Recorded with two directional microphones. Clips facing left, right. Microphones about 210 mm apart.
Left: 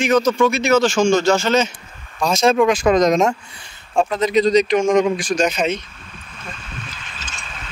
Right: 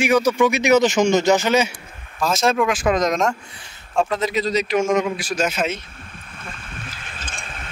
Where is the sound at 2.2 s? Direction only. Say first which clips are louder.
Left 4 dB; centre (ahead or behind).